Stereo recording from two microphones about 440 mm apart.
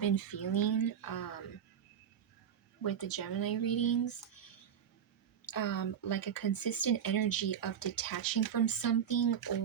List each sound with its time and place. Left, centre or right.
0.0 s speech: left
2.8 s speech: left
5.5 s speech: left